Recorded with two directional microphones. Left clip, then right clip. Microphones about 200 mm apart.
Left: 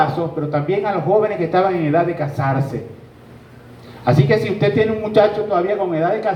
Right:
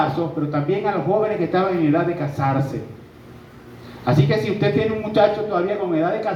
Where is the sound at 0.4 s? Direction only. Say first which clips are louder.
Left 5 dB; 50° left (ahead or behind).